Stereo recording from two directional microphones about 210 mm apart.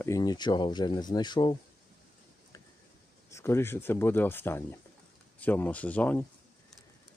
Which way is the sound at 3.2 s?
15° left (ahead or behind).